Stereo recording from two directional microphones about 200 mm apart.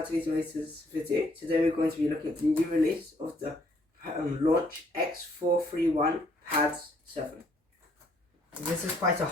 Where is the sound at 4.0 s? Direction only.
45° right (ahead or behind).